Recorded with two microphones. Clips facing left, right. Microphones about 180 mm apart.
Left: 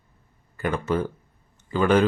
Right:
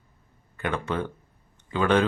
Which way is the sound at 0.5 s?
Centre (ahead or behind).